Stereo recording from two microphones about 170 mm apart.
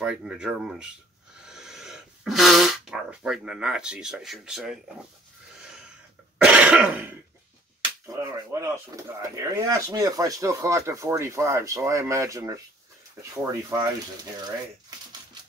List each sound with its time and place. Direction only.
0.0 s speech: 5° right (ahead or behind)
6.3 s throat clearing: 5° right (ahead or behind)
7.8 s speech: 20° right (ahead or behind)